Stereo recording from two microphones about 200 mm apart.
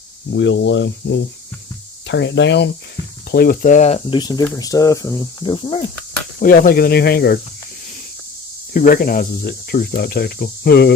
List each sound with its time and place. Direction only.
0.3 s speech: 65° left (ahead or behind)
3.3 s speech: 50° left (ahead or behind); by 4.2 s 35° left (ahead or behind)
4.2 s speech: 20° left (ahead or behind)
6.4 s speech: 45° left (ahead or behind)
8.7 s speech: 45° left (ahead or behind)